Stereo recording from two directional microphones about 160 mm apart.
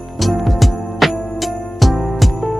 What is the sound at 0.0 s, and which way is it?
Music, centre (ahead or behind).